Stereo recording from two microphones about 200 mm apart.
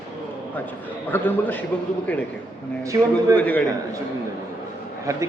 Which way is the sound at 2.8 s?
15° right (ahead or behind).